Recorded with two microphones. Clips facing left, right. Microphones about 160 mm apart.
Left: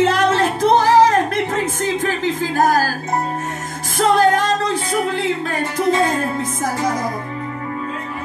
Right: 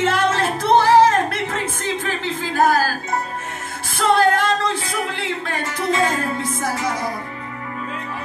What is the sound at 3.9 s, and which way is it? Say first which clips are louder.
Music: left 2 dB; 40° left (ahead or behind).